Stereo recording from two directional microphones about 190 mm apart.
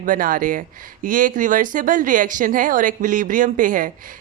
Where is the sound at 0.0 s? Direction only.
45° right (ahead or behind).